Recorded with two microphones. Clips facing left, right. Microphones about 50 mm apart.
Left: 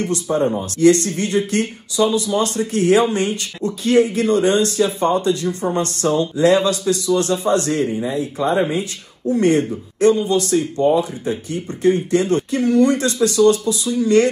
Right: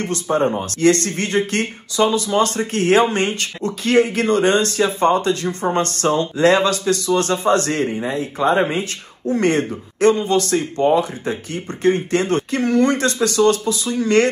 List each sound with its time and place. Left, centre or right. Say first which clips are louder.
0.0 s speech: even; right